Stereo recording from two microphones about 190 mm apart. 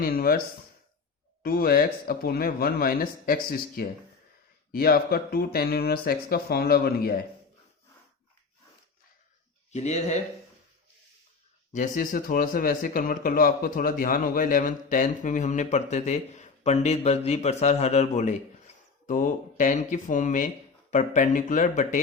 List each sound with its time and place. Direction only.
0.0 s a sound: 50° left (ahead or behind)
1.4 s speech: 50° left (ahead or behind)
9.7 s speech: 35° left (ahead or behind)
11.7 s speech: 45° left (ahead or behind)